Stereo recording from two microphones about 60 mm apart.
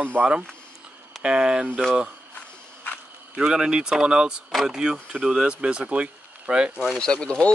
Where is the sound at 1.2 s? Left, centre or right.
Centre.